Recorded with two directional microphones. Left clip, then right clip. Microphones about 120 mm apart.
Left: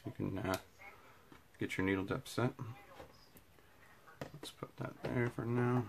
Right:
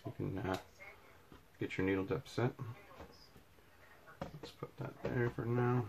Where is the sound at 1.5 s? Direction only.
35° left (ahead or behind).